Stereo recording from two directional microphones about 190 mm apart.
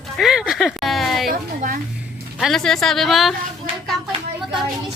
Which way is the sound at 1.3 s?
45° right (ahead or behind).